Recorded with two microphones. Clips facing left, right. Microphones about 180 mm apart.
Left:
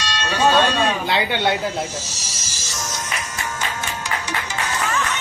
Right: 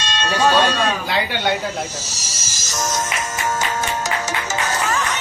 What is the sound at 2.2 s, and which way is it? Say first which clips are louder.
Music: right 1 dB; 45° right (ahead or behind).